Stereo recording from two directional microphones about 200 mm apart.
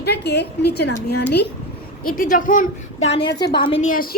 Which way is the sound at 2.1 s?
40° left (ahead or behind).